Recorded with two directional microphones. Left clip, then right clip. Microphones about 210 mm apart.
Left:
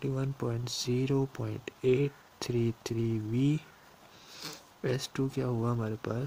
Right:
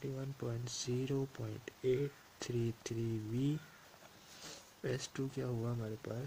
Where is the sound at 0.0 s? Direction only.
40° left (ahead or behind).